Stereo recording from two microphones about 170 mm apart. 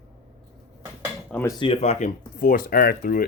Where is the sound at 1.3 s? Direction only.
10° left (ahead or behind).